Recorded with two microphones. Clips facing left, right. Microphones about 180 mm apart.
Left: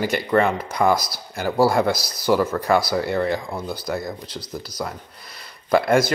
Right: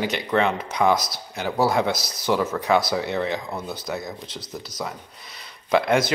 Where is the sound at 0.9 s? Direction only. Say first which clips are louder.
Even; 25° right (ahead or behind).